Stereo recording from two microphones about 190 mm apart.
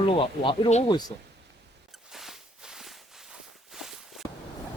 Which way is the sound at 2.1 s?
Centre (ahead or behind).